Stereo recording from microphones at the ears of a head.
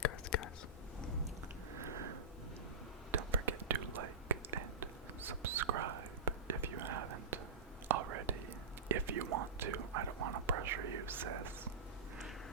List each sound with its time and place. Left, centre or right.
0.0 s whispering: left
1.8 s a sound: right
3.1 s whispering: right